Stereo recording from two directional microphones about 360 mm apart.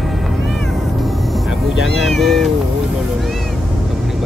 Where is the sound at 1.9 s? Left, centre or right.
Centre.